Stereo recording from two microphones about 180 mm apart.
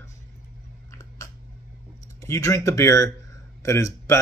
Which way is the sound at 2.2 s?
15° left (ahead or behind).